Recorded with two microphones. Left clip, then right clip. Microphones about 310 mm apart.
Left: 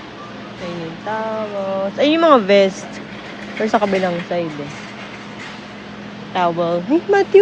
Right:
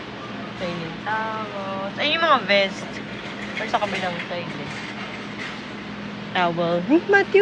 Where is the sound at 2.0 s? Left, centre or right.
Left.